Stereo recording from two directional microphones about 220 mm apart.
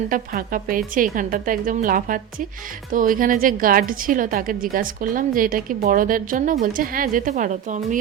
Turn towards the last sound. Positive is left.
turn(degrees=-35)  # may be behind; listen again after turning